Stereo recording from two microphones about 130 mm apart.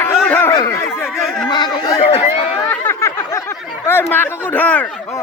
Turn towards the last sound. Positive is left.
turn(degrees=10)  # may be behind; listen again after turning